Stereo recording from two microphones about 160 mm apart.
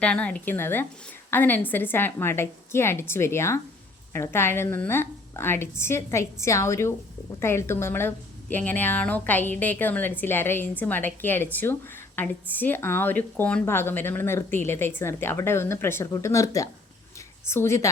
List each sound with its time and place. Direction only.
0.0 s a woman's voice: 5° left (ahead or behind)